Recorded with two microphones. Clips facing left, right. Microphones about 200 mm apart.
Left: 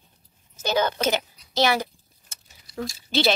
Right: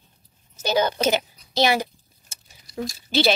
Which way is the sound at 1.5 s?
15° right (ahead or behind).